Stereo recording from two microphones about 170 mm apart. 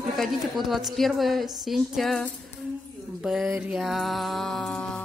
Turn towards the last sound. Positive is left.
turn(degrees=0)  # may be behind; listen again after turning